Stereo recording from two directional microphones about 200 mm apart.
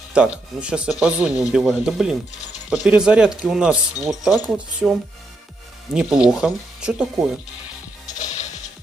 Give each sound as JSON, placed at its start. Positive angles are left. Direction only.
{"t": 0.1, "sound": "speech", "side_deg": -5}
{"t": 8.1, "sound": "music", "side_deg": 35}